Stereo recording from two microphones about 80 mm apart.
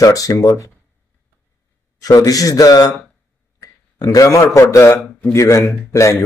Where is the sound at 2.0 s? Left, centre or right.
Left.